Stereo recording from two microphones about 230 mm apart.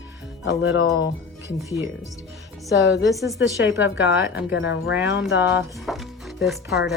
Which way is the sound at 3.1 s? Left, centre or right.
Centre.